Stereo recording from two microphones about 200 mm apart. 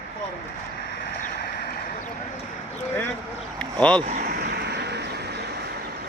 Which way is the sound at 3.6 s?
5° left (ahead or behind).